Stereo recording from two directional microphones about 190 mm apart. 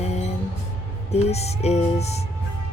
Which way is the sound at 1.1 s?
35° left (ahead or behind).